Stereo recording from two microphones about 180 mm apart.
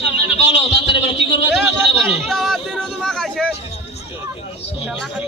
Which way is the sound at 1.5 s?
Centre (ahead or behind).